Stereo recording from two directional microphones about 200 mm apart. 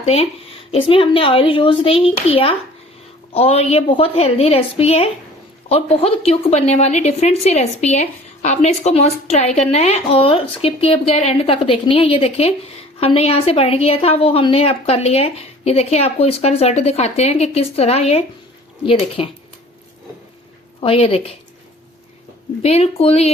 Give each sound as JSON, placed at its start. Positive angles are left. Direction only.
{"t": 0.0, "sound": "a woman's voice", "side_deg": 30}
{"t": 20.8, "sound": "speech", "side_deg": 30}
{"t": 22.6, "sound": "a woman's voice", "side_deg": 30}